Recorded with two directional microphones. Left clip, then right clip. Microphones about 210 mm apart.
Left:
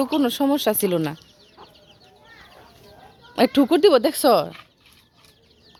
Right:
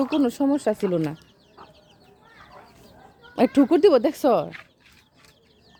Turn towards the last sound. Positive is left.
turn(degrees=0)  # may be behind; listen again after turning